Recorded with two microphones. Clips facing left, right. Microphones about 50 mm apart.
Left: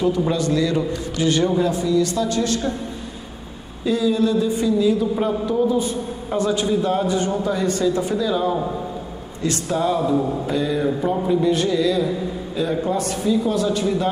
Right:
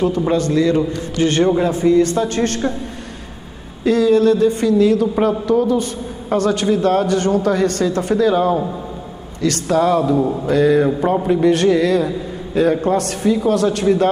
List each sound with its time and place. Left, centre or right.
0.3 s a man's voice: right
3.8 s a man's voice: right
9.4 s a man's voice: right
10.5 s a man's voice: right